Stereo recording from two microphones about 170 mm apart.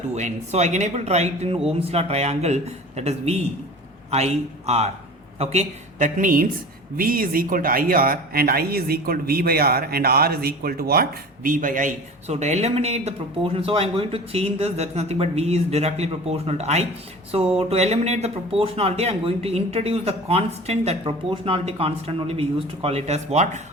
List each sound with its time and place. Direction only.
0.1 s speech: 40° right (ahead or behind)